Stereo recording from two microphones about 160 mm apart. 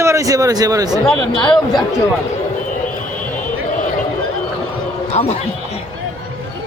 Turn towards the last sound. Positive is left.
turn(degrees=40)  # may be behind; listen again after turning